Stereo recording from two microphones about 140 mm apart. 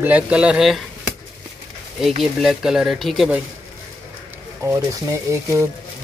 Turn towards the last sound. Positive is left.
turn(degrees=-20)  # may be behind; listen again after turning